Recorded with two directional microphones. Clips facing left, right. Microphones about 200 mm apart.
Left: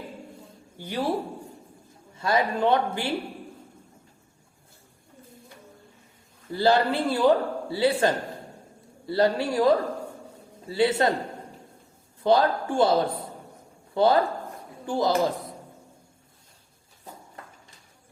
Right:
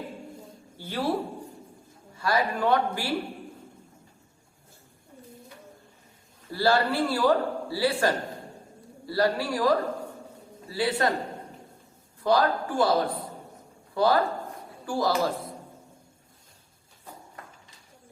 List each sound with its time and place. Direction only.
0.8 s speech: 15° left (ahead or behind)
2.1 s a man's voice: 20° left (ahead or behind)
6.5 s a man's voice: 20° left (ahead or behind)
12.2 s a man's voice: 25° left (ahead or behind)